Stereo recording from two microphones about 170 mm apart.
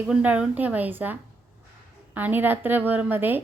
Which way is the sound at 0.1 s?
5° right (ahead or behind).